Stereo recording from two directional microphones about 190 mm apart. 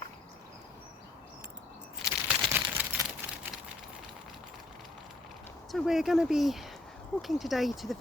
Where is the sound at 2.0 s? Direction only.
Centre (ahead or behind).